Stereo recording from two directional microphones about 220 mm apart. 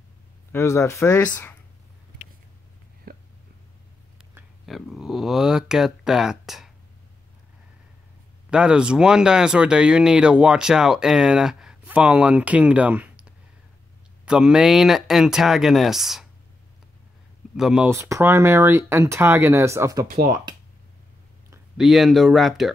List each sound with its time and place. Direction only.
0.5 s speech: 10° left (ahead or behind)
3.1 s a sound: 45° right (ahead or behind)
4.4 s speech: centre (ahead or behind)
8.5 s speech: 5° right (ahead or behind)
17.6 s speech: 5° right (ahead or behind)
21.7 s speech: centre (ahead or behind)